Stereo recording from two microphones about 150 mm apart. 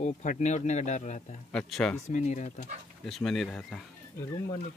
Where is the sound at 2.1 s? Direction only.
50° left (ahead or behind).